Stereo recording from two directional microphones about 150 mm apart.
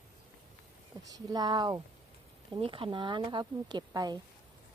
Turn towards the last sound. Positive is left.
turn(degrees=-25)  # may be behind; listen again after turning